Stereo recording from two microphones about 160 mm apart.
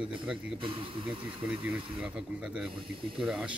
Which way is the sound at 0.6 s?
30° right (ahead or behind).